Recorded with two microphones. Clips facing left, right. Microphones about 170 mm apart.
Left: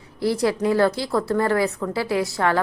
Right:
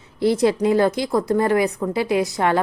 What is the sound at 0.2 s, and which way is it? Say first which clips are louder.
A woman's voice: right 4 dB; 20° right (ahead or behind).